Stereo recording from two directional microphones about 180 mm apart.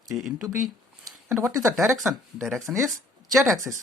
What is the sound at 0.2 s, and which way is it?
Speech, centre (ahead or behind).